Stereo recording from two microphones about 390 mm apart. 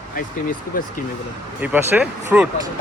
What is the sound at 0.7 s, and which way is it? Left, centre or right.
Speech, left.